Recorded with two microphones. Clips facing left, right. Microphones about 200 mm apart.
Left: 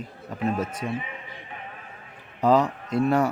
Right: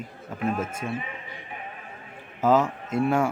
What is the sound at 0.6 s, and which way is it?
Speech, 25° right (ahead or behind).